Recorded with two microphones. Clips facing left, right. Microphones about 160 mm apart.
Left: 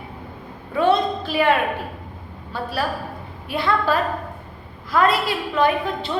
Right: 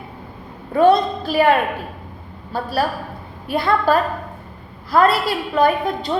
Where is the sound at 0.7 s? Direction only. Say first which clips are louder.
Right 4 dB; 40° right (ahead or behind).